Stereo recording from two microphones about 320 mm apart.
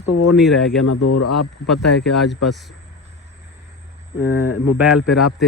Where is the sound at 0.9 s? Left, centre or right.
Left.